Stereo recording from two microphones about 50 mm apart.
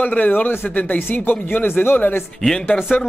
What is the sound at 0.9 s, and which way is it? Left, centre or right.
Speech, left.